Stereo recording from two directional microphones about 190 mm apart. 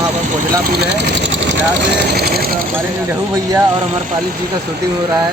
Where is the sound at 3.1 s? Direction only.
15° right (ahead or behind).